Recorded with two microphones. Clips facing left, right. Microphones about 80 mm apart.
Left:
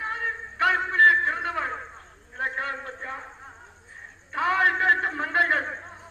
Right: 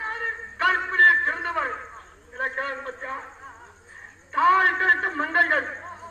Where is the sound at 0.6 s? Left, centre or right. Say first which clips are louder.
Even; right.